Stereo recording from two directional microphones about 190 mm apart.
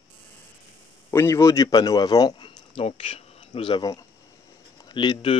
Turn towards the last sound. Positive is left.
turn(degrees=25)  # may be behind; listen again after turning